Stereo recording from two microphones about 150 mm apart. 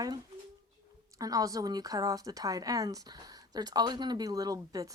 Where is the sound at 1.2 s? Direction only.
25° right (ahead or behind).